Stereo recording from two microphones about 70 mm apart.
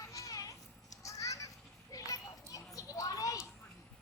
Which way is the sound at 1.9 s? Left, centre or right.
Left.